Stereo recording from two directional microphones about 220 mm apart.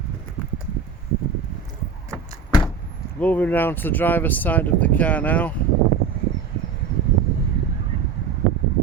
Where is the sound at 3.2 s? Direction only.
5° left (ahead or behind).